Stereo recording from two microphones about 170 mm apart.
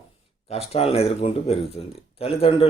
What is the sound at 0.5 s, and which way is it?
Speech, 35° left (ahead or behind).